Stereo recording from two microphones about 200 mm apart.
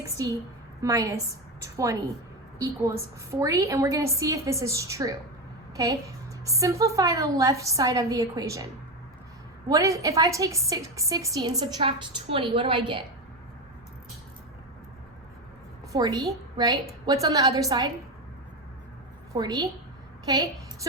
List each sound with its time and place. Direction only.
0.8 s a woman's voice: 15° right (ahead or behind)
3.3 s a woman's voice: 15° right (ahead or behind)
9.6 s a woman's voice: 15° right (ahead or behind)
15.9 s a woman's voice: 20° right (ahead or behind)
19.3 s a woman's voice: 20° right (ahead or behind)